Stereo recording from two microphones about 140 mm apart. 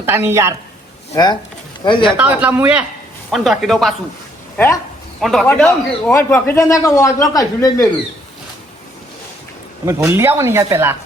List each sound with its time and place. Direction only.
0.0 s speech: 15° right (ahead or behind)
1.1 s speech: 30° left (ahead or behind)
2.1 s speech: 10° right (ahead or behind)
4.5 s speech: 15° left (ahead or behind)
5.2 s a man's voice: centre (ahead or behind); by 7.9 s 25° left (ahead or behind)
9.8 s speech: 20° right (ahead or behind)